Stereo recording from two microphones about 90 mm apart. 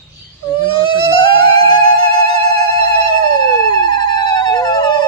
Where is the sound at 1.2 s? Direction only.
65° left (ahead or behind).